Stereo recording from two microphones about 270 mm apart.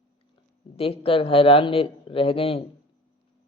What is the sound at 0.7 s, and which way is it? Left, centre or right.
Speech, left.